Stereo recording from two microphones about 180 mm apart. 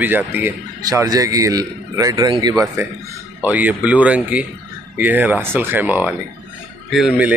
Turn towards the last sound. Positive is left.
turn(degrees=-5)  # may be behind; listen again after turning